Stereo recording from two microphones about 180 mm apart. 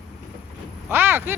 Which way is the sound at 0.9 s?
10° right (ahead or behind).